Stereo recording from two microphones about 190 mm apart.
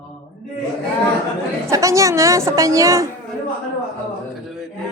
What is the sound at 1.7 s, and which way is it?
Speech, 15° right (ahead or behind).